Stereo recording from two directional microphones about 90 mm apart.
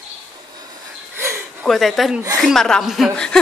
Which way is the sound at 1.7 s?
Centre (ahead or behind).